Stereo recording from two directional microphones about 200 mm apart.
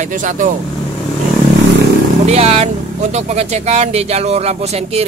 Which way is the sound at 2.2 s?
30° right (ahead or behind).